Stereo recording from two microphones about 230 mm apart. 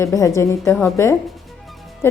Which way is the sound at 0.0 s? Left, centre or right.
Centre.